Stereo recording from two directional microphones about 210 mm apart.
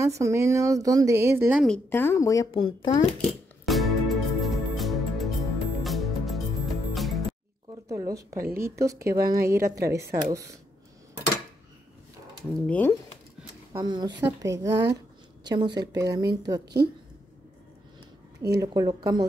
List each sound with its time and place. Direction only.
0.0 s speech: 15° right (ahead or behind)
1.7 s speech: 10° left (ahead or behind)
3.6 s music: centre (ahead or behind)
7.9 s speech: 15° right (ahead or behind)
12.4 s speech: 5° left (ahead or behind)
13.7 s speech: 20° right (ahead or behind)
16.6 s speech: 50° right (ahead or behind)
18.4 s speech: 15° right (ahead or behind)